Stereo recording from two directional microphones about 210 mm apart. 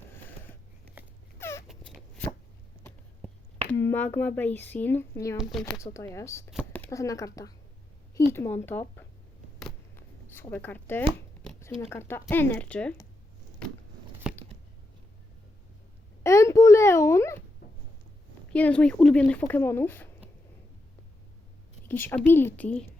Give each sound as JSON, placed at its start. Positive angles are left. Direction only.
{"t": 1.0, "sound": "dog", "side_deg": -10}
{"t": 1.4, "sound": "dog", "side_deg": 10}
{"t": 1.6, "sound": "a sound", "side_deg": 0}
{"t": 3.7, "sound": "speech", "side_deg": 10}
{"t": 5.4, "sound": "speech", "side_deg": 0}
{"t": 5.8, "sound": "speech", "side_deg": 15}
{"t": 9.6, "sound": "a sound", "side_deg": 5}
{"t": 10.5, "sound": "speech", "side_deg": 10}
{"t": 14.3, "sound": "biting", "side_deg": -5}
{"t": 16.2, "sound": "a sound", "side_deg": 15}
{"t": 18.5, "sound": "speech", "side_deg": 5}
{"t": 21.8, "sound": "speech", "side_deg": 10}